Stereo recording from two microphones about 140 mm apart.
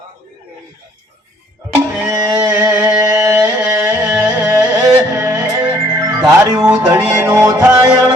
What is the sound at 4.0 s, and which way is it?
Music, 10° right (ahead or behind).